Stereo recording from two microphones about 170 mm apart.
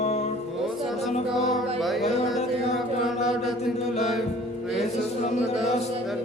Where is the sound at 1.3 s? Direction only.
Centre (ahead or behind).